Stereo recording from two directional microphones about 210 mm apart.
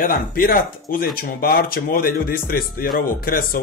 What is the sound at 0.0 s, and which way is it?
Speech, 45° left (ahead or behind).